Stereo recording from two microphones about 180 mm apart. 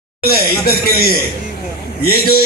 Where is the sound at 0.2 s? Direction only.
60° left (ahead or behind).